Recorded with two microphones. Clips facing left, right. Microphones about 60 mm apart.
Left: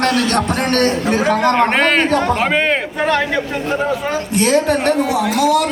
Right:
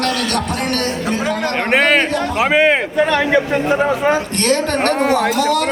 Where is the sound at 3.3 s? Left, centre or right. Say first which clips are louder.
Right 4 dB; centre.